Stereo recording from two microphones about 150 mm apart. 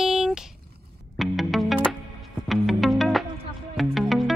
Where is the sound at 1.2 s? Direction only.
Centre (ahead or behind).